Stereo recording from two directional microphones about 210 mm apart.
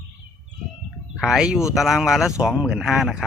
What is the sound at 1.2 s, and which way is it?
Speech, centre (ahead or behind).